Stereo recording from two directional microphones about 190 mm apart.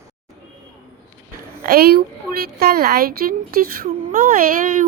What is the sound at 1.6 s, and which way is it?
Speech, 55° right (ahead or behind).